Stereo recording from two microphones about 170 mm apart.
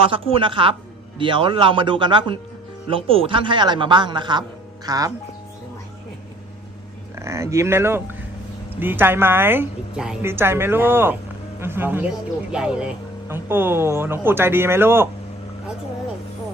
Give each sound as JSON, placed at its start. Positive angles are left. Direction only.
{"t": 0.0, "sound": "a woman's voice", "side_deg": -30}
{"t": 7.2, "sound": "speech", "side_deg": -15}